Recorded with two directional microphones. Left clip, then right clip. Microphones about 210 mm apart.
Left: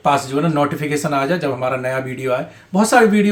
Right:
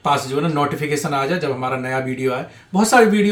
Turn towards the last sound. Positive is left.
turn(degrees=20)  # may be behind; listen again after turning